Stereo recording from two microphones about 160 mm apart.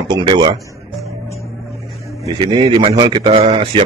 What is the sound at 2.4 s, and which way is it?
A man's voice, 30° right (ahead or behind).